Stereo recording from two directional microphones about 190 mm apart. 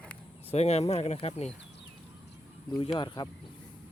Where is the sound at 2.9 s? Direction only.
25° left (ahead or behind).